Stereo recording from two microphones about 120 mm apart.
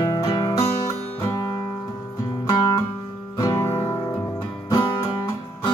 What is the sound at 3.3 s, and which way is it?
Music, 25° left (ahead or behind).